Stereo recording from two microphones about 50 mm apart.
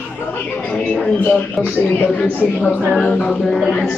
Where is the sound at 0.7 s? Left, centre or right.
Left.